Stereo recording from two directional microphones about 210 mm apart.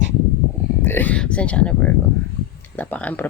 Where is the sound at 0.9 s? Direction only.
10° left (ahead or behind).